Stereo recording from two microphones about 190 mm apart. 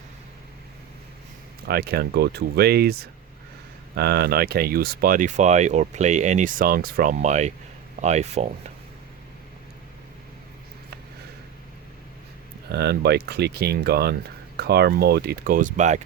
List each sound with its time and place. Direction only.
1.6 s speech: 55° right (ahead or behind); by 8.7 s 35° right (ahead or behind)
12.6 s speech: 60° right (ahead or behind); by 16.0 s 40° right (ahead or behind)